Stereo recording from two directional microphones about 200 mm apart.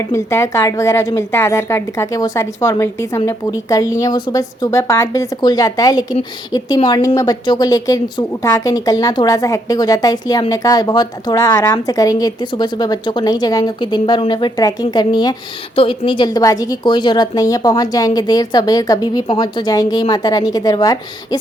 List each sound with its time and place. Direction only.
0.1 s a woman's voice: 15° left (ahead or behind)